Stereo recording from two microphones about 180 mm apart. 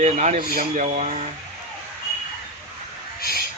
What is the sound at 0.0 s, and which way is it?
Speech, 40° right (ahead or behind).